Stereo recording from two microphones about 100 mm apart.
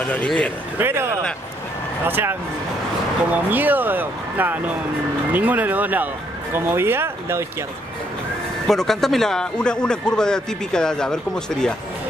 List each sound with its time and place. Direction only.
0.0 s speech: 10° left (ahead or behind)
0.7 s speech: 25° right (ahead or behind)
8.6 s speech: 5° left (ahead or behind)